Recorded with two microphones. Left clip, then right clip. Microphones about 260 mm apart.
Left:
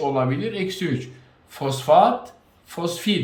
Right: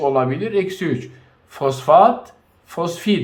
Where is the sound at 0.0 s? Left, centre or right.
Centre.